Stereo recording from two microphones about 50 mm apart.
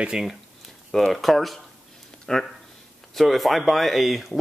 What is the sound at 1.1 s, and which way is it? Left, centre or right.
Speech, centre.